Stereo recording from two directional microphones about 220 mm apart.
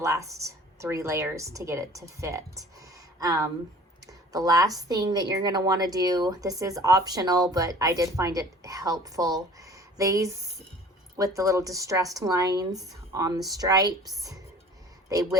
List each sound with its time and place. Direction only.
0.0 s a woman's voice: 15° right (ahead or behind)